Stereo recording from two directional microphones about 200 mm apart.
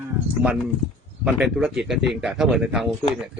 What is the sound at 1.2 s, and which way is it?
A man's voice, 5° right (ahead or behind).